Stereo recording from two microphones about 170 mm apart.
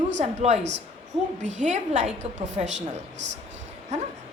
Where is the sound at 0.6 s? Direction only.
90° right.